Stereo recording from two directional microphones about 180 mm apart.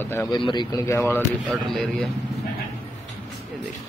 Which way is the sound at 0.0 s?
10° left (ahead or behind).